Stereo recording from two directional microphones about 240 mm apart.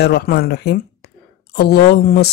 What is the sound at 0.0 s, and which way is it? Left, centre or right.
A woman's voice, left.